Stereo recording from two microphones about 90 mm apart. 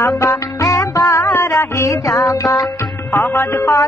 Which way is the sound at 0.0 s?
30° left (ahead or behind).